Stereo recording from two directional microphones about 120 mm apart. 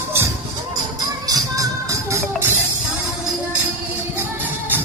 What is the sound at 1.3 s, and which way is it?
Music, 30° right (ahead or behind).